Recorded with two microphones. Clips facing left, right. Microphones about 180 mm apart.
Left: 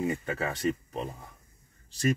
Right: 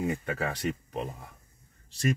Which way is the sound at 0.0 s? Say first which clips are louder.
Even; centre (ahead or behind).